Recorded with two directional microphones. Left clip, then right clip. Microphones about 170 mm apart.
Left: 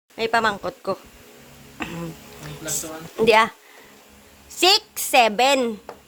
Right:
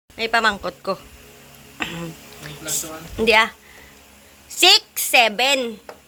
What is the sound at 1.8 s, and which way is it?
Insect, 5° left (ahead or behind).